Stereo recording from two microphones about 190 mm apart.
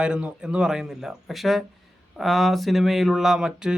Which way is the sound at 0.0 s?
5° right (ahead or behind).